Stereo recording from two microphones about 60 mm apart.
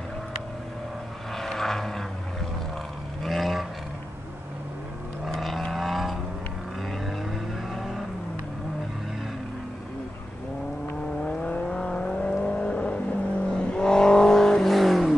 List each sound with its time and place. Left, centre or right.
1.3 s vehicle: centre
3.3 s roar: centre
5.2 s vehicle: centre
7.7 s vehicle: centre
11.2 s vehicle: left; by 15.1 s centre